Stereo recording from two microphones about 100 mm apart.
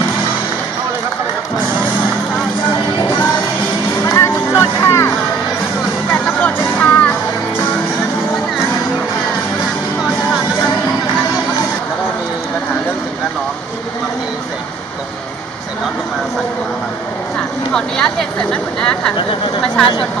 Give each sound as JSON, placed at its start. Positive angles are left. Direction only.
{"t": 4.0, "sound": "music", "side_deg": 30}
{"t": 6.4, "sound": "music", "side_deg": 15}
{"t": 17.7, "sound": "a sound", "side_deg": 5}